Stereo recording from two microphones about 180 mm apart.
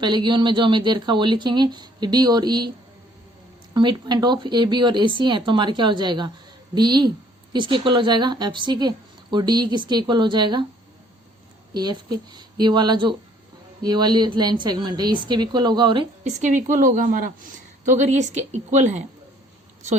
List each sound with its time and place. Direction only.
0.0 s speech: 25° right (ahead or behind)
3.8 s speech: 25° right (ahead or behind)
11.7 s speech: 25° right (ahead or behind)
16.2 s a woman's voice: 45° right (ahead or behind)